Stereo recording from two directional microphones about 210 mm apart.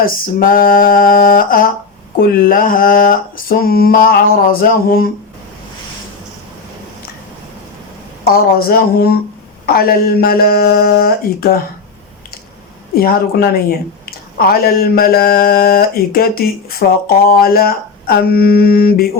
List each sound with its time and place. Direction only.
0.0 s speech: 45° left (ahead or behind)
8.2 s speech: 45° left (ahead or behind)
13.0 s speech: 45° left (ahead or behind)